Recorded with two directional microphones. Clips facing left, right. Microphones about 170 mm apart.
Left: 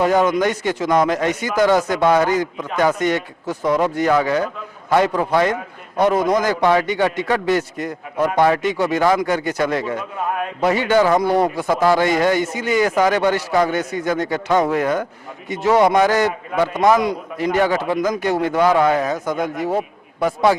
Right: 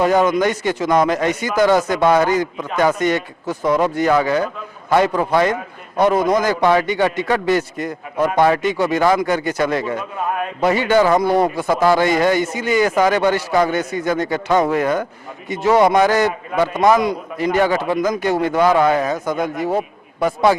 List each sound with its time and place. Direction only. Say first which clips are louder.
0.2 s a man's voice: right 1 dB; 10° right (ahead or behind)
3.4 s a man's voice: right 1 dB; 25° right (ahead or behind)
11.1 s speech: right 1 dB; 30° right (ahead or behind)
11.8 s a man's voice: right 1 dB; 10° right (ahead or behind)
19.2 s speech: right 1 dB; 30° right (ahead or behind)
19.6 s a sound: right 1 dB; 30° right (ahead or behind)
20.2 s a man's voice: right 1 dB; 10° right (ahead or behind)